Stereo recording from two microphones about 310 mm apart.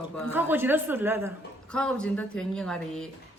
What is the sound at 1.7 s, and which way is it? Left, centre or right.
A woman's voice, centre.